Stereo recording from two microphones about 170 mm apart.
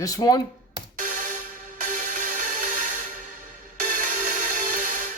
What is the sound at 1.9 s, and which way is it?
Music, 50° right (ahead or behind).